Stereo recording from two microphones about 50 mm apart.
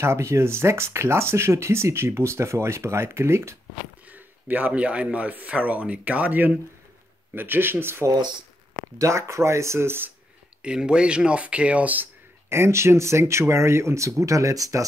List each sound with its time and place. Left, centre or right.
0.0 s speech: right
4.1 s a man's voice: right
7.3 s speech: right
8.9 s speech: right
10.6 s a man's voice: centre; by 12.1 s right
12.4 s speech: right